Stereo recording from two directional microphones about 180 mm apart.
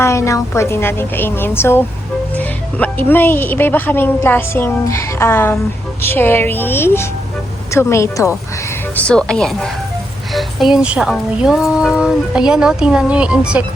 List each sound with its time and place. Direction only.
0.0 s a woman's voice: 15° left (ahead or behind)
9.0 s speech: 5° left (ahead or behind)